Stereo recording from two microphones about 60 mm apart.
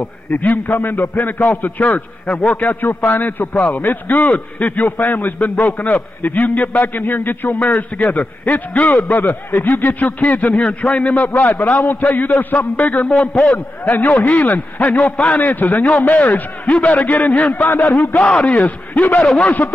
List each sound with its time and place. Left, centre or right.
0.0 s a man's voice: left
13.8 s a man's voice: left
18.2 s a man's voice: centre
19.2 s speech: centre